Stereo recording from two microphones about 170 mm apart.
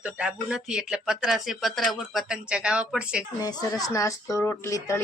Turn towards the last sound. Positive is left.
turn(degrees=15)  # may be behind; listen again after turning